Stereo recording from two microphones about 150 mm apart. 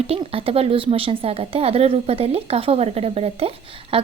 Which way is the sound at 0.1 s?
40° right (ahead or behind).